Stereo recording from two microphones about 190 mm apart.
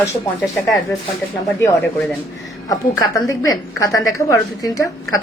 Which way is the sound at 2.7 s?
15° left (ahead or behind).